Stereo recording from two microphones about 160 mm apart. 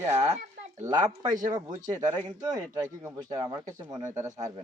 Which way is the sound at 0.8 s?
25° right (ahead or behind).